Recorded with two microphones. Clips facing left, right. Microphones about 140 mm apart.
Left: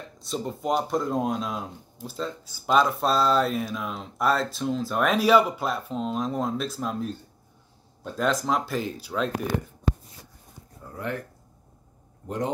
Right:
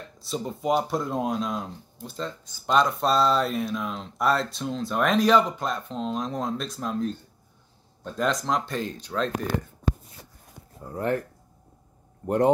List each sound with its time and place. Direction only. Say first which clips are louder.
0.2 s speech: even; centre (ahead or behind)